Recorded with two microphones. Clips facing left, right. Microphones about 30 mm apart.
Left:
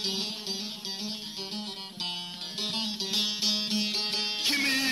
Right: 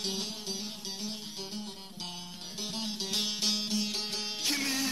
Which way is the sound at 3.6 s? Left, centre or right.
Left.